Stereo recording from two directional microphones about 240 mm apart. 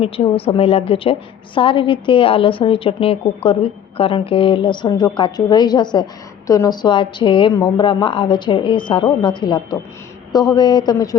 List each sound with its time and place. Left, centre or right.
0.0 s a woman's voice: left